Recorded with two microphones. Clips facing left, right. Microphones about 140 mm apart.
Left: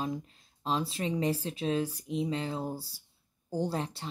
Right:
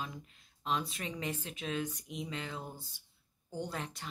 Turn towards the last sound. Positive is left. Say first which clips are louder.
# left 7 dB
turn(degrees=30)  # may be behind; listen again after turning